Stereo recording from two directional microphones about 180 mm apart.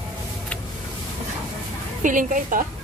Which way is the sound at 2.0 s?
45° right (ahead or behind).